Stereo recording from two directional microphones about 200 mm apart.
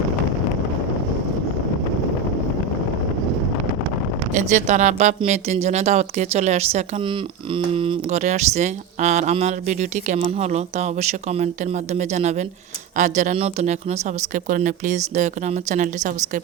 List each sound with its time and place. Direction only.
4.3 s speech: 35° right (ahead or behind)